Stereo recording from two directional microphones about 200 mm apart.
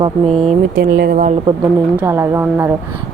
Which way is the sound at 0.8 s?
55° right (ahead or behind).